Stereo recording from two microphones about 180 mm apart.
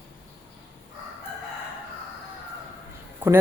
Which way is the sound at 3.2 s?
10° right (ahead or behind).